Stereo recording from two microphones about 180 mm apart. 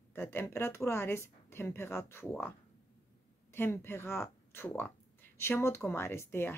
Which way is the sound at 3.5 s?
10° left (ahead or behind).